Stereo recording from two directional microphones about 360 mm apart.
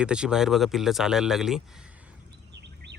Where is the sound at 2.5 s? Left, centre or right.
Right.